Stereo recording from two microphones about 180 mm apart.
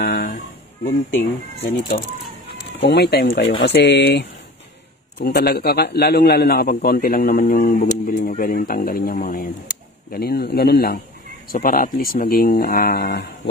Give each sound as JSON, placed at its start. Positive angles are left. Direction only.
{"t": 0.0, "sound": "music", "side_deg": 60}
{"t": 1.9, "sound": "speech", "side_deg": 35}
{"t": 2.8, "sound": "speech", "side_deg": 65}
{"t": 5.2, "sound": "a man's voice", "side_deg": 60}